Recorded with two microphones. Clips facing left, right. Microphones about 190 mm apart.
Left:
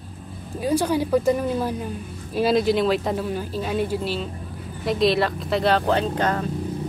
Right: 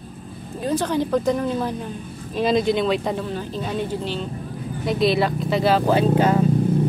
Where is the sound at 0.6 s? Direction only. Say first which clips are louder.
Left 1 dB; 10° left (ahead or behind).